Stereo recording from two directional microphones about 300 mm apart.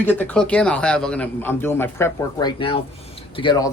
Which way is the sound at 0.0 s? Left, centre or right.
Centre.